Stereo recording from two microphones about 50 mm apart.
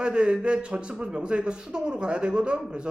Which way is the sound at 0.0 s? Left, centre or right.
Centre.